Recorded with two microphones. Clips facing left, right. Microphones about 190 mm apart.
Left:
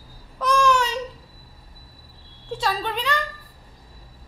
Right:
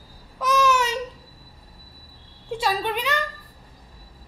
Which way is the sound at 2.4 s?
10° right (ahead or behind).